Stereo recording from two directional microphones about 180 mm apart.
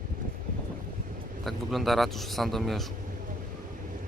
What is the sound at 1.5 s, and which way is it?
Speech, centre (ahead or behind).